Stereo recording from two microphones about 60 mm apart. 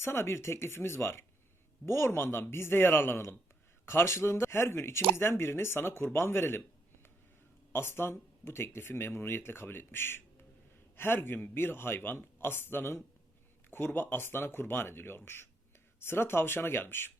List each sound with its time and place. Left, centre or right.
0.0 s speech: left
7.7 s speech: left